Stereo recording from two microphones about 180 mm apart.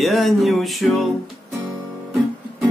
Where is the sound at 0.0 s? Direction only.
Centre (ahead or behind).